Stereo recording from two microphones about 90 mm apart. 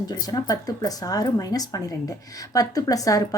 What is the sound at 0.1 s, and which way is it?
Speech, 45° left (ahead or behind).